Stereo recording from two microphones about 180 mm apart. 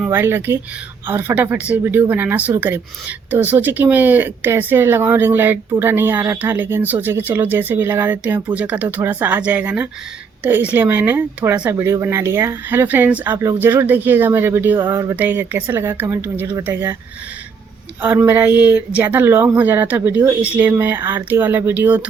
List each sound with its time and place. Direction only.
0.0 s speech: 10° right (ahead or behind)
18.0 s speech: 10° right (ahead or behind)